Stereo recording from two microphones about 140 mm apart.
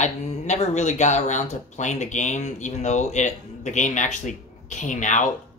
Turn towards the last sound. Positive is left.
turn(degrees=60)  # may be behind; listen again after turning